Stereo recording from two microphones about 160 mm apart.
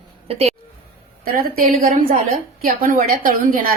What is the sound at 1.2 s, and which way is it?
A woman's voice, 65° right (ahead or behind).